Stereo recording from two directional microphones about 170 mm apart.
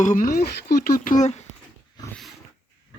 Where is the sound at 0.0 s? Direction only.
50° left (ahead or behind).